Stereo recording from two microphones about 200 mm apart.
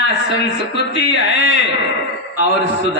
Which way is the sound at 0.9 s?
55° left (ahead or behind).